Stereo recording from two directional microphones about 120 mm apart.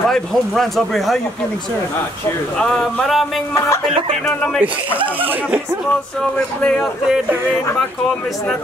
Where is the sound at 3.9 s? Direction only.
55° right (ahead or behind).